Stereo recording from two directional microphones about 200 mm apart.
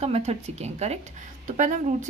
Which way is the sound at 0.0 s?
30° right (ahead or behind).